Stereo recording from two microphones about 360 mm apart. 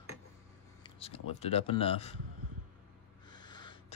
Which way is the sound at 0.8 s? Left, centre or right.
Centre.